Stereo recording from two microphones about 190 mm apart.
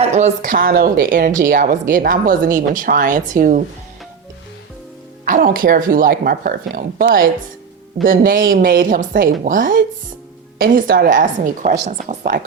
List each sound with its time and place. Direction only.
0.0 s speech: 35° right (ahead or behind)
5.2 s speech: 45° right (ahead or behind)